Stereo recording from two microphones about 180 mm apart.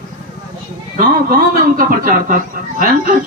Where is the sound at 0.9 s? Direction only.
50° right (ahead or behind).